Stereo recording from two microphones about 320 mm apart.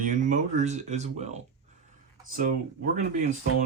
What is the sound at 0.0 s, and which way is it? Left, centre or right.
Speech, right.